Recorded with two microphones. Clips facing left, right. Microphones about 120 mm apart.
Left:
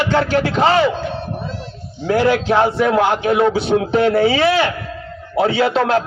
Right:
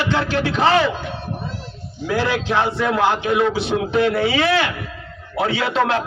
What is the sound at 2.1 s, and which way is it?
Speech, 45° left (ahead or behind).